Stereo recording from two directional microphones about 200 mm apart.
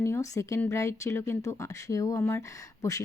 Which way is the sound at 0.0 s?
15° left (ahead or behind).